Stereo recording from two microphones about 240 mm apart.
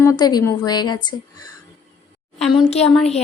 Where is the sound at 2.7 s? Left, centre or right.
Left.